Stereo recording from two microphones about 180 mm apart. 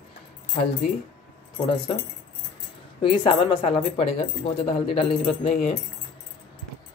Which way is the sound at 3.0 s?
25° left (ahead or behind).